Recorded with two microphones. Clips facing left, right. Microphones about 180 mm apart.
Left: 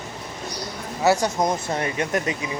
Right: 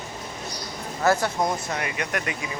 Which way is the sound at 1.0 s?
15° left (ahead or behind).